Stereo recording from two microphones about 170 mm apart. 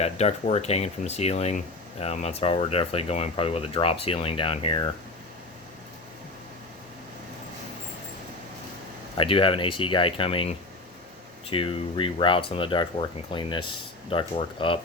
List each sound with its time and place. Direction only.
0.0 s speech: 40° left (ahead or behind)
9.1 s speech: 30° left (ahead or behind)